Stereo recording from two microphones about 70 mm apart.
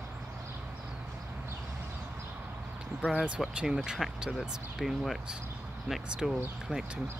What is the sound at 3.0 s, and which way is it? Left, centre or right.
Speech, centre.